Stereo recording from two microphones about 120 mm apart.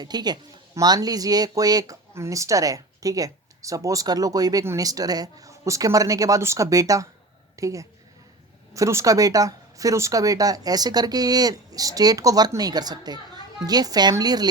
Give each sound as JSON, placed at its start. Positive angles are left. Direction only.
{"t": 0.0, "sound": "a woman's voice", "side_deg": -35}